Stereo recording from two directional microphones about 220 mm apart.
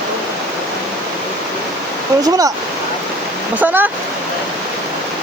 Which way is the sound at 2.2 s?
15° right (ahead or behind).